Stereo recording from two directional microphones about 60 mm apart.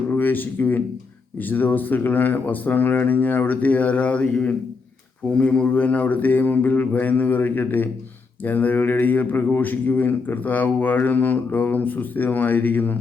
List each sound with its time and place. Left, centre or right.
0.1 s a man's voice: left